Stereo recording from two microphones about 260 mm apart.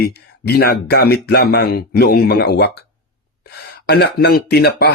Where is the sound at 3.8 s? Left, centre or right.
Left.